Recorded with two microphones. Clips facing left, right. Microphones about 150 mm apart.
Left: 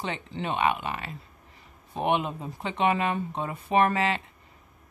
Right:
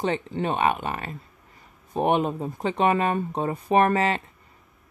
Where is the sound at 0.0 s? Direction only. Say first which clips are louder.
Right 7 dB; 40° right (ahead or behind).